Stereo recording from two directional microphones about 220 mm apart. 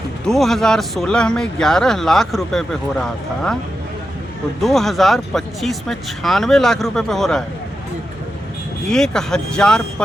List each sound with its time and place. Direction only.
0.3 s speech: centre (ahead or behind)
4.6 s speech: centre (ahead or behind)
8.9 s speech: centre (ahead or behind)